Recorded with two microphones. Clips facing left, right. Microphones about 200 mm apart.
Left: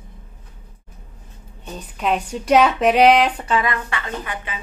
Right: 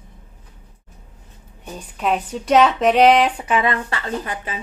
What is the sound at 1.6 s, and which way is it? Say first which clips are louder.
Speech: even; 5° right (ahead or behind).